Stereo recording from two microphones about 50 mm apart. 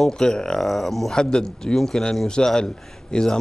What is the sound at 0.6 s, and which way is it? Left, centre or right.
A man's voice, centre.